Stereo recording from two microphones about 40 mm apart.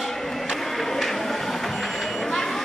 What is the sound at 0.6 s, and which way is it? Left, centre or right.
Vehicle, centre.